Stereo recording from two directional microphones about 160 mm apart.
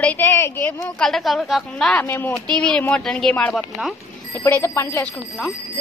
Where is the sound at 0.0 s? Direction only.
10° left (ahead or behind).